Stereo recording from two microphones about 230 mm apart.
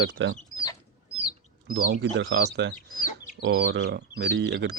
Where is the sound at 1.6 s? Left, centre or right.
Right.